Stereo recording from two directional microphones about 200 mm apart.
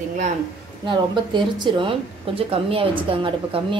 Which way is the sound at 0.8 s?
20° right (ahead or behind).